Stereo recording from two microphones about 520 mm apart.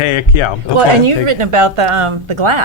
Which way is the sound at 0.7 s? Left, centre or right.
Right.